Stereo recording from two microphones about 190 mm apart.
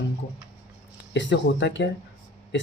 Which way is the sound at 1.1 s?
70° left (ahead or behind).